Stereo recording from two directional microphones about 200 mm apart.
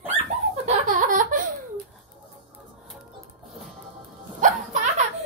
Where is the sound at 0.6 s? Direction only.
40° right (ahead or behind).